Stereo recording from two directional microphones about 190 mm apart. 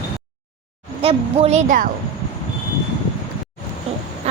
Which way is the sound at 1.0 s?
35° right (ahead or behind).